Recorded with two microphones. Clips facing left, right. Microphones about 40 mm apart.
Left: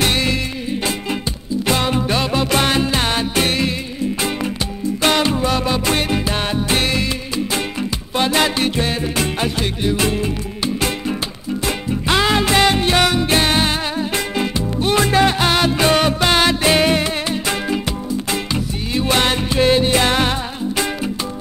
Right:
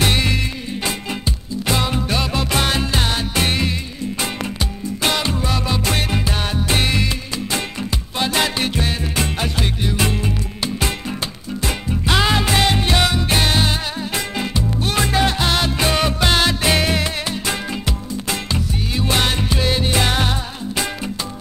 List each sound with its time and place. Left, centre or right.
0.0 s music: centre
1.7 s music: centre
3.3 s music: centre
5.0 s music: centre
8.2 s music: left
8.5 s music: centre
11.6 s music: centre
15.0 s music: left; by 19.6 s centre
19.6 s music: left
19.9 s music: centre